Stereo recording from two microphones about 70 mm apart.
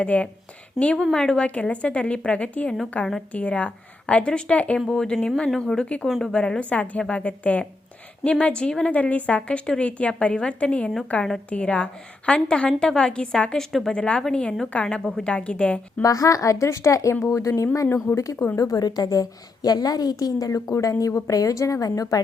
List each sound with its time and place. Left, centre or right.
0.0 s a woman's voice: centre
0.8 s speech: centre
1.1 s a woman's voice: centre
1.5 s a woman's voice: centre
16.0 s a woman's voice: left
18.5 s a woman's voice: left